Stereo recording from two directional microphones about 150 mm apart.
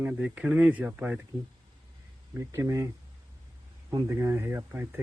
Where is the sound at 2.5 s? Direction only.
20° right (ahead or behind).